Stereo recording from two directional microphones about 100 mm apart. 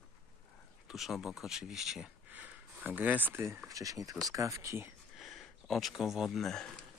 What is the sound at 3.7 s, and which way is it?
Speech, 35° right (ahead or behind).